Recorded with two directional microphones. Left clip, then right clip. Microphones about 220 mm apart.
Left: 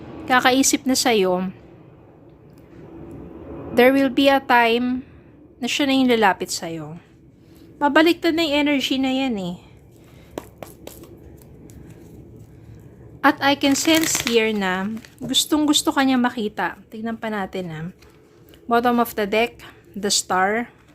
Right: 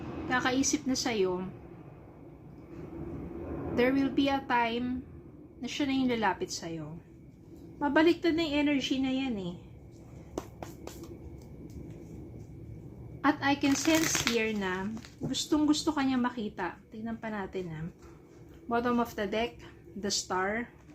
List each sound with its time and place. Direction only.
0.3 s a woman's voice: 45° left (ahead or behind)
3.8 s a woman's voice: 50° left (ahead or behind)
13.2 s a woman's voice: 50° left (ahead or behind)